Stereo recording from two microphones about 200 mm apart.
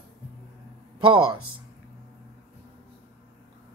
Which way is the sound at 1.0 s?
25° right (ahead or behind).